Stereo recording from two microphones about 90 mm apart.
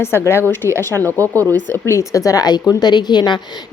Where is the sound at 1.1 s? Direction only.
35° right (ahead or behind).